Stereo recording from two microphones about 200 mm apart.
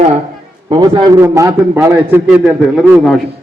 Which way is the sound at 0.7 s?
20° right (ahead or behind).